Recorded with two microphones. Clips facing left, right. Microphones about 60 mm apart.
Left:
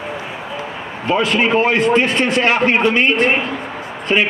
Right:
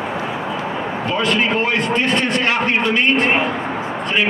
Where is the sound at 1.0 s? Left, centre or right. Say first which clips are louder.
Left 3 dB; centre.